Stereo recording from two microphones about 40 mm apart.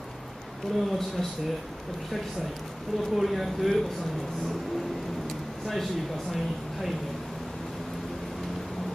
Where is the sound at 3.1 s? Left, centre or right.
Centre.